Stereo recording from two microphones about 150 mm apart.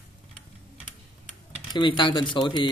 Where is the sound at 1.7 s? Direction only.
30° left (ahead or behind).